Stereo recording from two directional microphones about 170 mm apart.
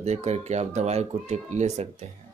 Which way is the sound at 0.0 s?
40° right (ahead or behind).